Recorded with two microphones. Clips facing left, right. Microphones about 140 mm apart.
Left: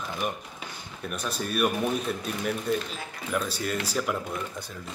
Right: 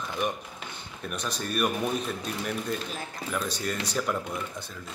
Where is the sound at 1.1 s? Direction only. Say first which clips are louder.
Left 1 dB; 5° left (ahead or behind).